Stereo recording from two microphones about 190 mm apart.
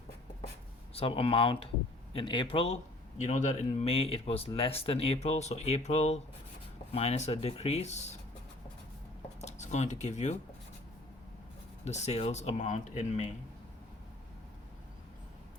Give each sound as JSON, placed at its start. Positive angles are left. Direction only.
{"t": 0.9, "sound": "speech", "side_deg": 30}
{"t": 9.4, "sound": "speech", "side_deg": 35}
{"t": 11.9, "sound": "speech", "side_deg": 35}